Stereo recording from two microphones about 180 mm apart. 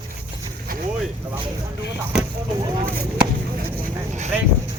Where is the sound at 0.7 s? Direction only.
55° right (ahead or behind).